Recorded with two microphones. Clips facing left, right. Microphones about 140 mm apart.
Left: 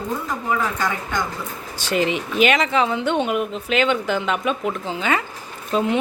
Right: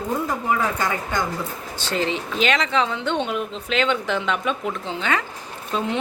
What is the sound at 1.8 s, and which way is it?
Speech, 15° left (ahead or behind).